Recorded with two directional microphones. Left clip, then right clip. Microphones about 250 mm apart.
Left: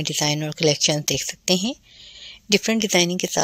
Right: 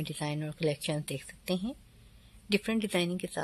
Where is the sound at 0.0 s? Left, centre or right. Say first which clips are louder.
Left 14 dB; left.